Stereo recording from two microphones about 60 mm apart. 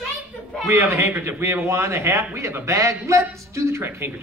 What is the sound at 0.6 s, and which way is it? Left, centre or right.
A man's voice, right.